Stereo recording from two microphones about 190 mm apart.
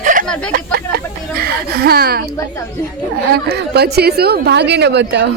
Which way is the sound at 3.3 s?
55° right (ahead or behind).